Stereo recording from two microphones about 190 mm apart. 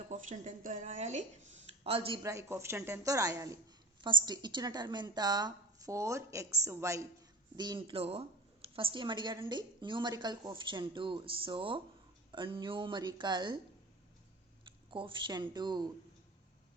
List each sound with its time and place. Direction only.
0.1 s a woman's voice: 40° right (ahead or behind)
1.8 s a woman's voice: 30° right (ahead or behind)
2.2 s a woman's voice: 15° right (ahead or behind)
14.8 s a woman's voice: 25° right (ahead or behind)